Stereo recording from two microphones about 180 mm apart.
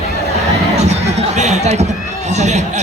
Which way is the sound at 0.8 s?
40° right (ahead or behind).